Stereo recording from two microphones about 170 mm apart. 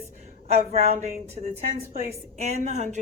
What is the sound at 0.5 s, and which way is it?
A woman's voice, 40° right (ahead or behind).